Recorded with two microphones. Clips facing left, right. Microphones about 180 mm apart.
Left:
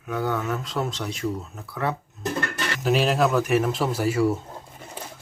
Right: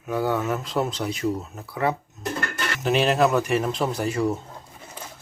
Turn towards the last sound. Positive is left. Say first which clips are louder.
# left 2 dB
turn(degrees=5)  # may be behind; listen again after turning